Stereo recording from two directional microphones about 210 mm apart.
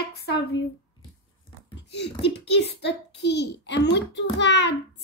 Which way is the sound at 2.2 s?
55° left (ahead or behind).